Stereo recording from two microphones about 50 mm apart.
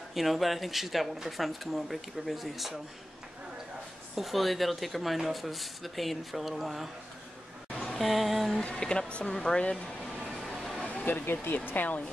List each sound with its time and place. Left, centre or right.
0.1 s speech: centre
4.1 s speech: centre
7.7 s a sound: centre
8.0 s speech: centre
8.7 s speech: centre
10.2 s a sound: centre
11.1 s speech: left